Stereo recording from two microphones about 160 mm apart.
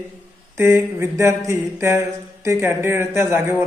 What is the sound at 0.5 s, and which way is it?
A woman's voice, 15° right (ahead or behind).